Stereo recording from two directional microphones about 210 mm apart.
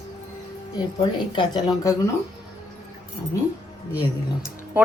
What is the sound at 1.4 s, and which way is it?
Speech, 20° left (ahead or behind).